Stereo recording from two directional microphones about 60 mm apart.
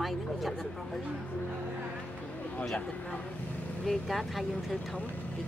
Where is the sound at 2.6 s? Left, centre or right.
Centre.